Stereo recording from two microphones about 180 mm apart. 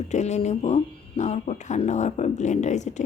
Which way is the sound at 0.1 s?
40° left (ahead or behind).